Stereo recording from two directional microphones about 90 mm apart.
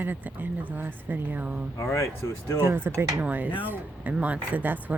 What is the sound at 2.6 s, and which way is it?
Speech, 25° right (ahead or behind).